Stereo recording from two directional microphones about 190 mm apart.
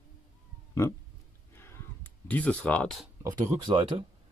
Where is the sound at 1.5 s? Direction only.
15° left (ahead or behind).